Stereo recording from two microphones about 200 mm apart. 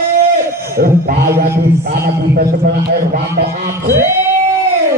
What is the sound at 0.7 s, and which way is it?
A man's voice, 50° right (ahead or behind).